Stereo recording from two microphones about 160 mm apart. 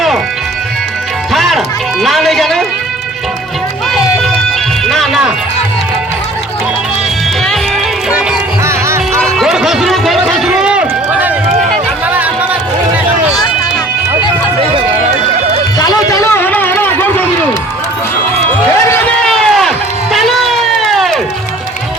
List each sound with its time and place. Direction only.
1.3 s music: centre (ahead or behind)
4.9 s music: centre (ahead or behind)
8.6 s music: 15° right (ahead or behind)
9.2 s run: centre (ahead or behind)
12.0 s music: 10° right (ahead or behind)
15.8 s a sound: 20° left (ahead or behind)
18.9 s run: 5° left (ahead or behind)